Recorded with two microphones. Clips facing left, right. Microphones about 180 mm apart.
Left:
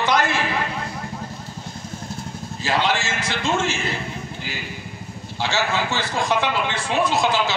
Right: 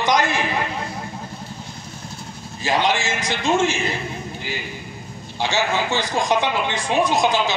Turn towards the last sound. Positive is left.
turn(degrees=-15)  # may be behind; listen again after turning